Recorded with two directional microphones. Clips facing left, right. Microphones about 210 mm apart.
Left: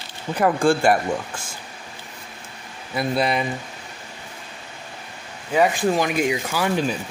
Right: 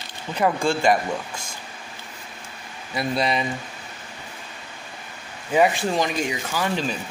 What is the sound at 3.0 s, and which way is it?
Speech, 5° left (ahead or behind).